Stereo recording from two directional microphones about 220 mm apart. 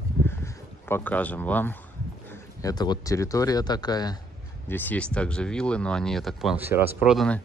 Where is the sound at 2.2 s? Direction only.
15° left (ahead or behind).